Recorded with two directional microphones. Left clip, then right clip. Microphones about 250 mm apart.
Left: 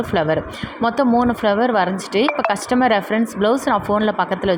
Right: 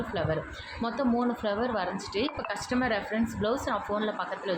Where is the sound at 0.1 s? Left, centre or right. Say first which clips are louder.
Left 13 dB; left.